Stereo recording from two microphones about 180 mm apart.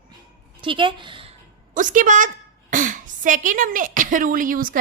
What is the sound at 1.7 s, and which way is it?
A woman's voice, 45° right (ahead or behind).